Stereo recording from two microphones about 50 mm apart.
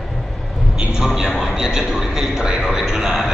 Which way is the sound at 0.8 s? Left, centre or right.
Centre.